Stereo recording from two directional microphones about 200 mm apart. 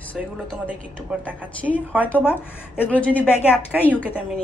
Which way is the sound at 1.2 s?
5° right (ahead or behind).